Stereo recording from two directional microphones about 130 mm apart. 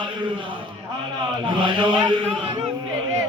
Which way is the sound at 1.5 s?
40° right (ahead or behind).